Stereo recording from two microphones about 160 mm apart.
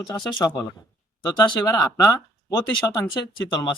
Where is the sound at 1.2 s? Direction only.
25° left (ahead or behind).